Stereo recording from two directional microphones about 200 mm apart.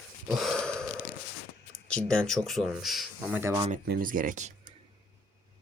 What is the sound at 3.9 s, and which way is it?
Speech, 45° right (ahead or behind).